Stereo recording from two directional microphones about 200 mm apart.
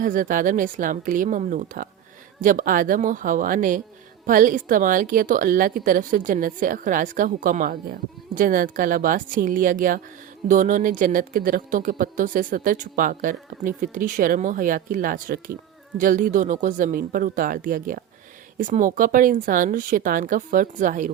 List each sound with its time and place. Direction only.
0.0 s speech: 40° right (ahead or behind)